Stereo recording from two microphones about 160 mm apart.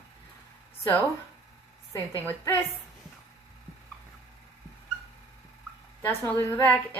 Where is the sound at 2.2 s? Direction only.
15° left (ahead or behind).